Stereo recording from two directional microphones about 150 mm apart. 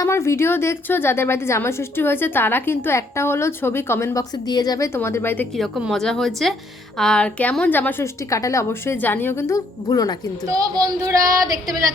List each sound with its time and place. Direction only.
0.0 s a woman's voice: 20° left (ahead or behind)
4.9 s a woman's voice: 15° left (ahead or behind)
5.5 s a woman's voice: centre (ahead or behind); by 10.2 s 25° left (ahead or behind)
10.5 s child singing: 25° right (ahead or behind)